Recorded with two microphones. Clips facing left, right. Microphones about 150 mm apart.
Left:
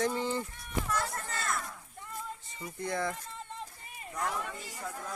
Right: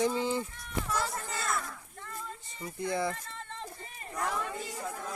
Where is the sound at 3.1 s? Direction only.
10° left (ahead or behind).